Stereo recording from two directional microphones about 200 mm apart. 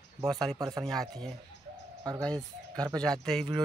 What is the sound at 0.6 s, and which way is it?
Speech, 15° right (ahead or behind).